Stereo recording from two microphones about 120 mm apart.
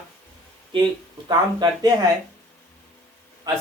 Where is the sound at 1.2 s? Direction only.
35° right (ahead or behind).